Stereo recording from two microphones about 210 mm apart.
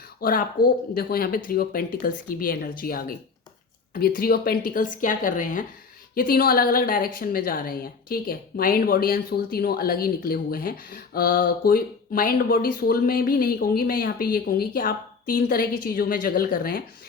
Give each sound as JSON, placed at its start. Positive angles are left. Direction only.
{"t": 0.2, "sound": "a woman's voice", "side_deg": 45}